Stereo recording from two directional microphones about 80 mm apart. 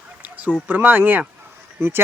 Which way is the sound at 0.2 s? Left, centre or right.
Centre.